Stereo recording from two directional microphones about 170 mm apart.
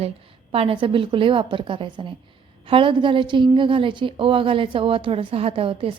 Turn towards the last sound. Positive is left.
turn(degrees=-35)  # may be behind; listen again after turning